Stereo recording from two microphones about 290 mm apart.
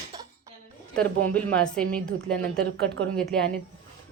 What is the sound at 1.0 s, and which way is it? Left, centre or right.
A woman's voice, centre.